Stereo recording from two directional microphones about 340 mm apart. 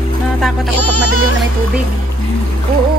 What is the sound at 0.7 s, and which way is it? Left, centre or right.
Music, left.